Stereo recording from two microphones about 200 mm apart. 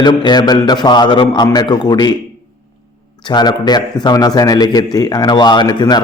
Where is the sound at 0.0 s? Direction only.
20° left (ahead or behind).